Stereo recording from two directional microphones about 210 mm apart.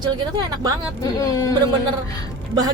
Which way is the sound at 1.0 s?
15° left (ahead or behind).